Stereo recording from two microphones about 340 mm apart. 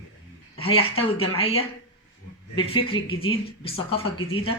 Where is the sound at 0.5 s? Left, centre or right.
Centre.